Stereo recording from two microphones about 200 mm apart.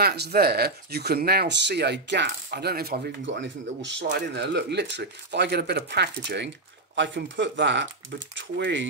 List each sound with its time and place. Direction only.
0.0 s speech: 50° right (ahead or behind)